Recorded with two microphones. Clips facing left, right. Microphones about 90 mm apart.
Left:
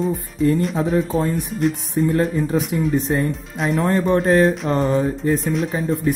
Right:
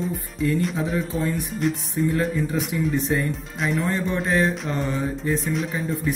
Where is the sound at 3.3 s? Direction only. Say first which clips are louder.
Left 3 dB; centre (ahead or behind).